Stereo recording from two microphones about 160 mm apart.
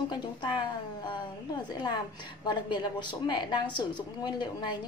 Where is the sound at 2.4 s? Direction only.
30° left (ahead or behind).